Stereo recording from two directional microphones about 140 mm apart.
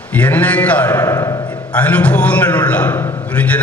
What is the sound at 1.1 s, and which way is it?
Speech, 25° left (ahead or behind).